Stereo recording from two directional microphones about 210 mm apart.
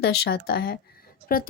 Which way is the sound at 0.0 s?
50° left (ahead or behind).